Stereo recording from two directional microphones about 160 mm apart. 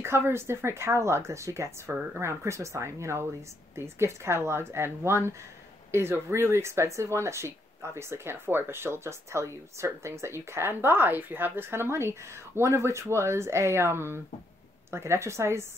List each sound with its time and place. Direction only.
0.0 s speech: 15° right (ahead or behind)